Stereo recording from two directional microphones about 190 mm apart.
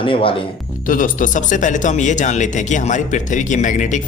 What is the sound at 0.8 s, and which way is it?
Speech, 45° left (ahead or behind).